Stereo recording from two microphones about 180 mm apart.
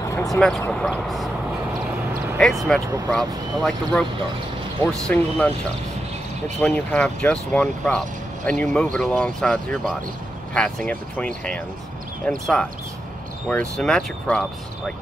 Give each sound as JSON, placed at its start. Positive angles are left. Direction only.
{"t": 0.0, "sound": "a sound", "side_deg": 20}
{"t": 0.3, "sound": "speech", "side_deg": 0}
{"t": 2.7, "sound": "speech", "side_deg": 5}
{"t": 6.6, "sound": "speech", "side_deg": 5}